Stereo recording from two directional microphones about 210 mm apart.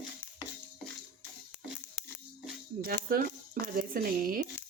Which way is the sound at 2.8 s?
45° right (ahead or behind).